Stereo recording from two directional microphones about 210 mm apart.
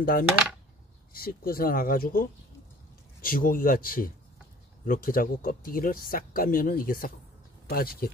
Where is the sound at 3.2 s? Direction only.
40° left (ahead or behind).